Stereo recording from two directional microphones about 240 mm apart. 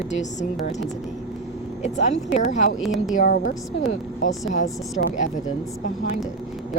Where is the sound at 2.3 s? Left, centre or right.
Left.